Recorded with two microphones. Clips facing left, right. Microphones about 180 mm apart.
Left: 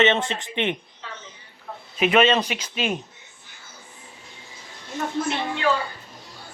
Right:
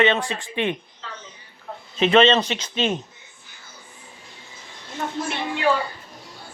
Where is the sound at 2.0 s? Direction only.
10° left (ahead or behind).